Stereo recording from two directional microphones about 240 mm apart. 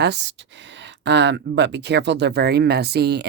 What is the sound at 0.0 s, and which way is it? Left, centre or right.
Speech, right.